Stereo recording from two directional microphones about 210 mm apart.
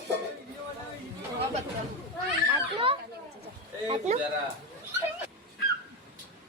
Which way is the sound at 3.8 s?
25° right (ahead or behind).